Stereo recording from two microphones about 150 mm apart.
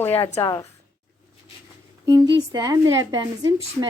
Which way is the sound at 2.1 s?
25° right (ahead or behind).